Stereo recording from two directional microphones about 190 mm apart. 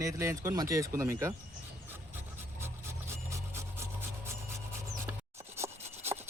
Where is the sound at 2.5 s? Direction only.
15° right (ahead or behind).